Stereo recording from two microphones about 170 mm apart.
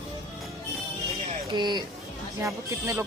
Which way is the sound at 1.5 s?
25° right (ahead or behind).